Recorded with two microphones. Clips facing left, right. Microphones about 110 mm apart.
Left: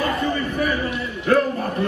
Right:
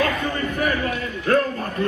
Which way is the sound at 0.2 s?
20° left (ahead or behind).